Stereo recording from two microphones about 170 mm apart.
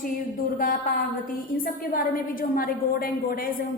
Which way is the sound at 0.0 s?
55° left (ahead or behind).